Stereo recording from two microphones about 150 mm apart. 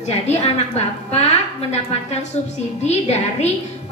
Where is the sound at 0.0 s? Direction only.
45° left (ahead or behind).